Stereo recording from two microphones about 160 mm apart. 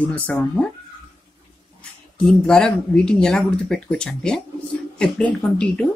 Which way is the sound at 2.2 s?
5° left (ahead or behind).